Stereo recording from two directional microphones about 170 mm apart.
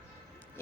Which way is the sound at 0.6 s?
15° left (ahead or behind).